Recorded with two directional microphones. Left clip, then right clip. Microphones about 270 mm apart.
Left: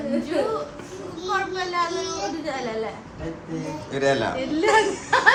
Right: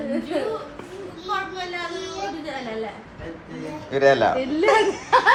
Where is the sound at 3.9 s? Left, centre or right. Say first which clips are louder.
Right 5 dB; centre.